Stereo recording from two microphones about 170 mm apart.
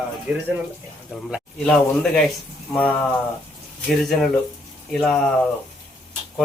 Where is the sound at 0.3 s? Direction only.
10° right (ahead or behind).